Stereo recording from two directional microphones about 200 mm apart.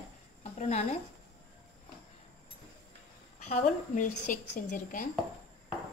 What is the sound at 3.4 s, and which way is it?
A woman's voice, 35° left (ahead or behind).